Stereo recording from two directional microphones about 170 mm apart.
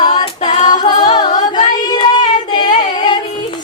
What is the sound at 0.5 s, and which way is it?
A capella, 50° left (ahead or behind).